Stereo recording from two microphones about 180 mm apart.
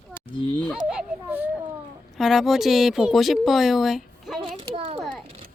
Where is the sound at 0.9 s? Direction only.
5° right (ahead or behind).